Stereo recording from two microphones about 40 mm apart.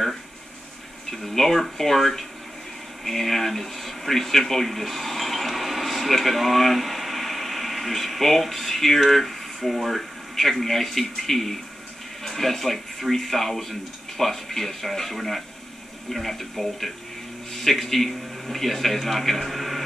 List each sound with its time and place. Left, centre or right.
1.1 s a man's voice: centre